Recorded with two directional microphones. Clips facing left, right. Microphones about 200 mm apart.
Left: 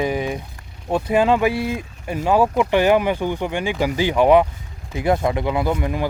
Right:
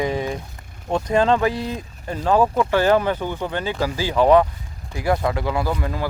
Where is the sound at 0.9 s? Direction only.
10° left (ahead or behind).